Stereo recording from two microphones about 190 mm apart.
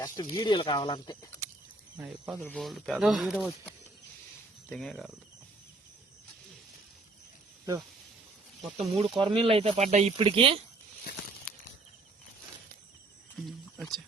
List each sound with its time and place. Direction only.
0.0 s snake: 20° left (ahead or behind)
0.3 s speech: 25° left (ahead or behind)
2.0 s speech: 5° right (ahead or behind)
3.4 s speech: 10° left (ahead or behind)
8.8 s speech: 25° right (ahead or behind)
13.4 s speech: centre (ahead or behind)